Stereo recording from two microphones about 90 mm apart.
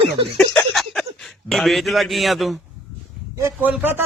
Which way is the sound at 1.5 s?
Centre (ahead or behind).